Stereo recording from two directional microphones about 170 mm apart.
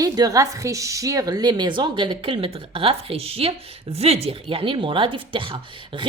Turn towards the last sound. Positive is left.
turn(degrees=-30)  # may be behind; listen again after turning